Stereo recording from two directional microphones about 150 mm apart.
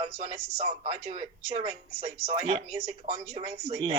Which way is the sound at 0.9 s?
40° right (ahead or behind).